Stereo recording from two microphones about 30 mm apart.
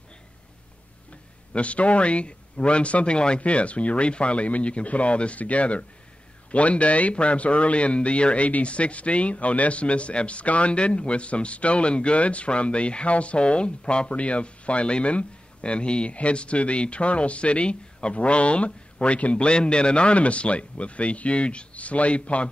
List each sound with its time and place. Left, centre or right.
1.5 s a man's voice: left